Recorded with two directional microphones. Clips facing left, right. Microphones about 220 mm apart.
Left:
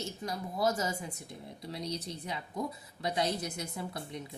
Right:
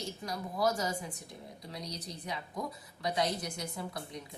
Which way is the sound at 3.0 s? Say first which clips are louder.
Left 1 dB; 25° left (ahead or behind).